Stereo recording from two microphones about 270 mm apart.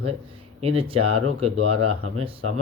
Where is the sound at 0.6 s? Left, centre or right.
Right.